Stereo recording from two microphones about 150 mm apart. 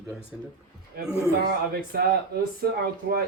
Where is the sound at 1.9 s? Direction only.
90° right.